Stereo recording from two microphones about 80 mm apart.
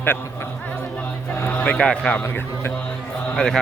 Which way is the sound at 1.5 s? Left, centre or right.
Centre.